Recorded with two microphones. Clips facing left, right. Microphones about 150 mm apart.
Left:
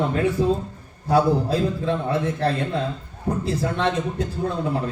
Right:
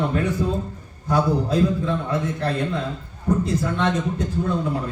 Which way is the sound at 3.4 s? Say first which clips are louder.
Right 1 dB; 30° left (ahead or behind).